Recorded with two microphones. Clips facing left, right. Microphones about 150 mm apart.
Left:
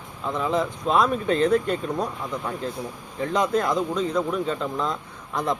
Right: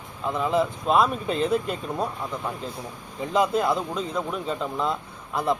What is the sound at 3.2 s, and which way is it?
Speech, 5° right (ahead or behind).